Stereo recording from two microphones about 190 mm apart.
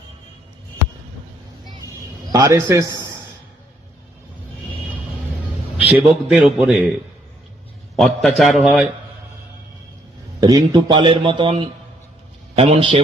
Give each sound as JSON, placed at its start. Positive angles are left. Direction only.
{"t": 2.3, "sound": "a man's voice", "side_deg": -15}
{"t": 5.7, "sound": "a man's voice", "side_deg": -5}
{"t": 7.9, "sound": "a man's voice", "side_deg": 0}
{"t": 10.4, "sound": "a man's voice", "side_deg": -20}